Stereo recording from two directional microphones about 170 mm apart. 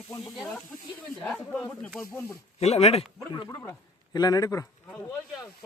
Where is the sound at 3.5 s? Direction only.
15° left (ahead or behind).